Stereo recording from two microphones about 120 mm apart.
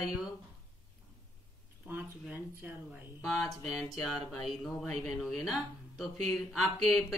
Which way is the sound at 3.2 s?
Centre (ahead or behind).